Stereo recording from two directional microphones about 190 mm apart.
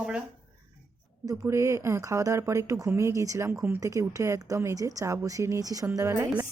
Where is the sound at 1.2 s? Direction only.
20° right (ahead or behind).